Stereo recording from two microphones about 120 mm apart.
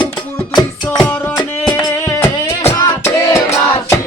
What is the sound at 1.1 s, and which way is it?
Music, 15° left (ahead or behind).